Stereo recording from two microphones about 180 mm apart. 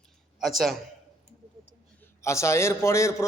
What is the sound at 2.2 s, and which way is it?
A man's voice, 15° left (ahead or behind).